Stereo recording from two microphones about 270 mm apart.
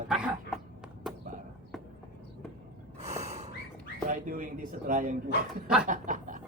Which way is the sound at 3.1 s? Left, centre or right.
Right.